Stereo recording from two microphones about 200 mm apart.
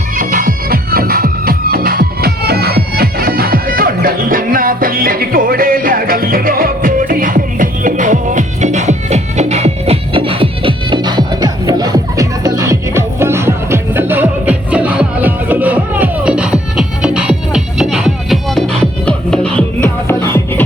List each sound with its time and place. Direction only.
0.2 s music: 45° right (ahead or behind); by 20.7 s 10° left (ahead or behind)